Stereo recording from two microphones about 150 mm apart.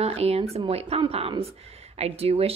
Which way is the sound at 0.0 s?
45° right (ahead or behind).